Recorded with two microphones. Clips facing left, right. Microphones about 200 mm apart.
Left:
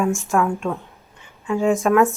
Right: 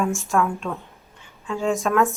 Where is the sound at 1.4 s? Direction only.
15° left (ahead or behind).